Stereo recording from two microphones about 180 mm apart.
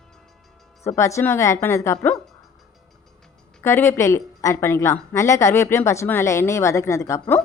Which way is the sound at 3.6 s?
15° left (ahead or behind).